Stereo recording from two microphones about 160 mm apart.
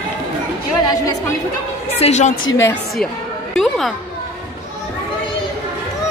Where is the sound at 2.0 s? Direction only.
45° left (ahead or behind).